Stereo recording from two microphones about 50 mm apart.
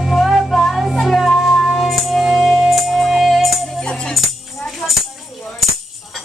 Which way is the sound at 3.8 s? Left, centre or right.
Centre.